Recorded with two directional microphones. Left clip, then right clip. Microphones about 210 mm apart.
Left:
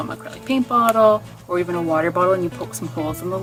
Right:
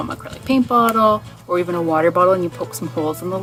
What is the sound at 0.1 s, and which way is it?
Speech, 45° right (ahead or behind).